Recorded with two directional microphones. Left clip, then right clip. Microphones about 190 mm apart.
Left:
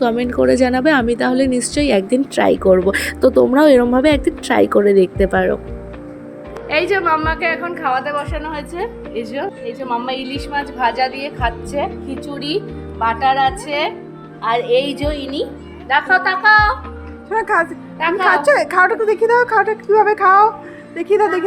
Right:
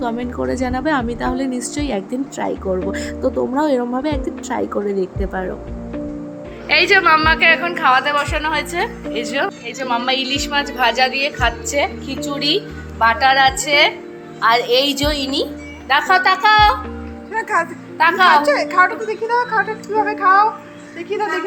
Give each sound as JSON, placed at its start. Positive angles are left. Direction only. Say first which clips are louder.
{"t": 0.0, "sound": "a woman's voice", "louder": "left 7 dB", "side_deg": 25}
{"t": 6.7, "sound": "a woman's voice", "louder": "right 3 dB", "side_deg": 5}
{"t": 13.0, "sound": "a woman's voice", "louder": "right 2 dB", "side_deg": -5}
{"t": 17.3, "sound": "a woman's voice", "louder": "left 3 dB", "side_deg": 35}
{"t": 18.0, "sound": "a woman's voice", "louder": "right 3 dB", "side_deg": -10}
{"t": 18.4, "sound": "a woman's voice", "louder": "left 2 dB", "side_deg": 45}